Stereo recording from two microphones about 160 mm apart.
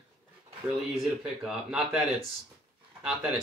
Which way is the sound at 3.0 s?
5° right (ahead or behind).